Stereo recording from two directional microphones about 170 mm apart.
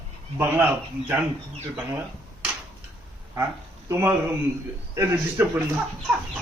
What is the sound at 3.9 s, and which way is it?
Speech, 15° right (ahead or behind).